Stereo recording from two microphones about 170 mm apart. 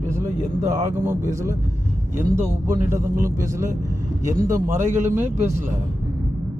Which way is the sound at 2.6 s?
15° right (ahead or behind).